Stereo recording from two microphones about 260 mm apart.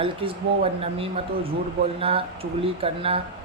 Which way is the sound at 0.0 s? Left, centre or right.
Right.